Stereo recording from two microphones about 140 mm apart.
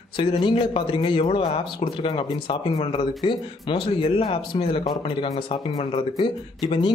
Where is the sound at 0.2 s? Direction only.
35° left (ahead or behind).